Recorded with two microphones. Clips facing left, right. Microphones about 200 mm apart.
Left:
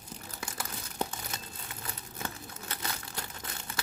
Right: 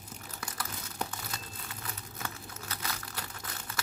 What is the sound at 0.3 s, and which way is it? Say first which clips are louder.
Crumpling: even; 25° left (ahead or behind).